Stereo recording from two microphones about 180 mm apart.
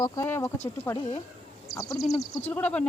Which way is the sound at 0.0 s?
15° left (ahead or behind).